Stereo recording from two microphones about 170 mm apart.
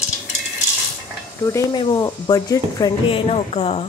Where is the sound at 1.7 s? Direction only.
25° left (ahead or behind).